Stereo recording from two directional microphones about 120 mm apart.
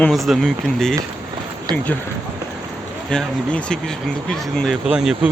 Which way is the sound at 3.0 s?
10° left (ahead or behind).